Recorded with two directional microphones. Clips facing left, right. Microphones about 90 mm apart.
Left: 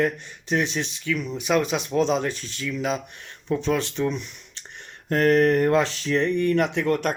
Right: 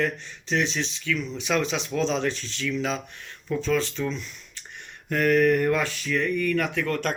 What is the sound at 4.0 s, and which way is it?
Speech, 20° left (ahead or behind).